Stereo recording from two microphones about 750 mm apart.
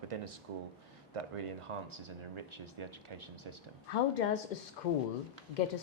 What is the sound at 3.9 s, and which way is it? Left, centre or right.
Speech, left.